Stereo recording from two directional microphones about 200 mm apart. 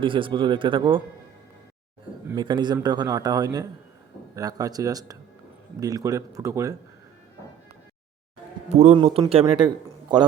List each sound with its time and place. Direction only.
0.0 s a man's voice: 25° right (ahead or behind)
2.2 s a man's voice: 20° right (ahead or behind)
8.7 s a man's voice: 35° right (ahead or behind)